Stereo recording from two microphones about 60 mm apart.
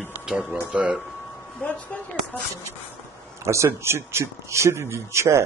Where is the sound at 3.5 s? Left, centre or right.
Right.